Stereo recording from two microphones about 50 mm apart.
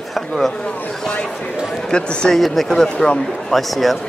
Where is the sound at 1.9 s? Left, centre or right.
Centre.